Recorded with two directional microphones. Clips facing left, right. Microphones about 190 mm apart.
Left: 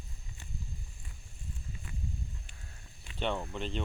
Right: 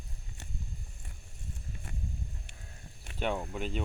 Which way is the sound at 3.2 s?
10° right (ahead or behind).